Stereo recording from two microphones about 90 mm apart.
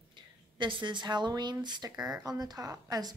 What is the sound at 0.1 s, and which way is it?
A woman's voice, 65° right (ahead or behind).